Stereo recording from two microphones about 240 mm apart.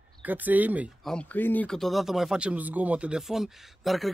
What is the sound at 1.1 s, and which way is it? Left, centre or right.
Speech, centre.